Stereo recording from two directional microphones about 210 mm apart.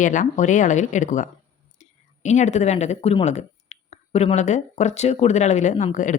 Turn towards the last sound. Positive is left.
turn(degrees=35)  # may be behind; listen again after turning